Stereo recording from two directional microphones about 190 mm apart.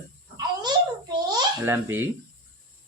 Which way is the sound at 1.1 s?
20° right (ahead or behind).